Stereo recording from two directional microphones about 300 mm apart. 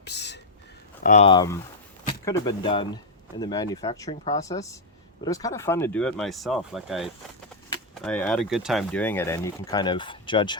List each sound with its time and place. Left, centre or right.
0.0 s speech: left
1.0 s speech: left